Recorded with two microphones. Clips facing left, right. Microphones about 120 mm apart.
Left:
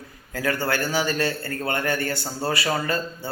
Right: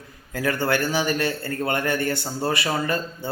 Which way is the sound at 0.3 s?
20° right (ahead or behind).